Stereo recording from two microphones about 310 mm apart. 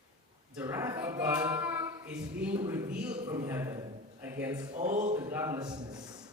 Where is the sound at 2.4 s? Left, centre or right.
Centre.